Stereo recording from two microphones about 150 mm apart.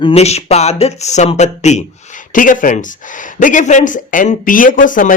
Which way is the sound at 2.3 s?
65° left (ahead or behind).